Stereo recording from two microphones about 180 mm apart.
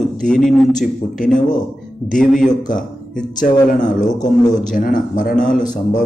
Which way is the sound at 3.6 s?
45° left (ahead or behind).